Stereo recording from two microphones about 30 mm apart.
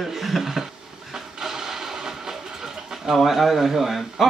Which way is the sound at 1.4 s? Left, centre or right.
Centre.